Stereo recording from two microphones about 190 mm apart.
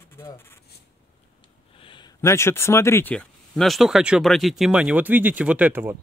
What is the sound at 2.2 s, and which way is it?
Speech, 15° left (ahead or behind).